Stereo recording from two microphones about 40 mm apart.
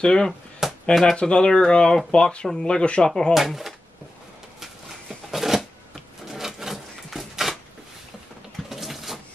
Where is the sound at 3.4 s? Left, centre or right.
Centre.